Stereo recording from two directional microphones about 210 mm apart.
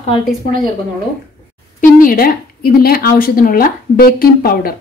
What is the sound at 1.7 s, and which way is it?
A woman's voice, 40° left (ahead or behind).